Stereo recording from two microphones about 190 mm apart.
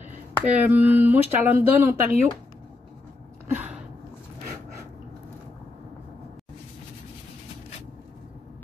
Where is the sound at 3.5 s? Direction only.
10° right (ahead or behind).